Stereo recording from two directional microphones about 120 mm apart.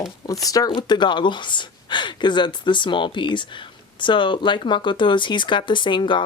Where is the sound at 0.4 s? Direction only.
30° left (ahead or behind).